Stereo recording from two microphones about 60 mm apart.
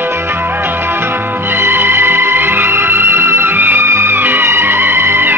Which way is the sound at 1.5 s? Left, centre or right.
Right.